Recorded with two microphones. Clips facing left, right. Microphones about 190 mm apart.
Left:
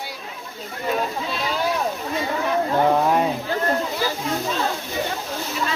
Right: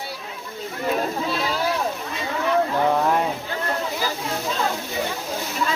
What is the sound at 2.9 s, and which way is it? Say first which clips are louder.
Speech: left 2 dB; 20° left (ahead or behind).